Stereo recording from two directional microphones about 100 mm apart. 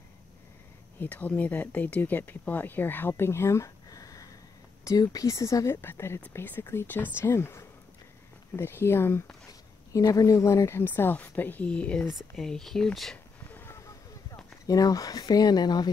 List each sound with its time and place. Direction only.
0.9 s speech: 15° left (ahead or behind)
9.5 s speech: 35° left (ahead or behind); by 12.1 s 10° left (ahead or behind)
12.1 s speech: centre (ahead or behind)
13.5 s a sound: 20° left (ahead or behind)
14.7 s speech: 35° left (ahead or behind)